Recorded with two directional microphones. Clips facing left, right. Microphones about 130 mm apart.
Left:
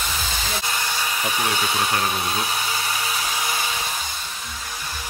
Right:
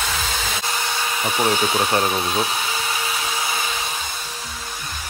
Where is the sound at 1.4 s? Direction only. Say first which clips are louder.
Right 6 dB; 30° right (ahead or behind).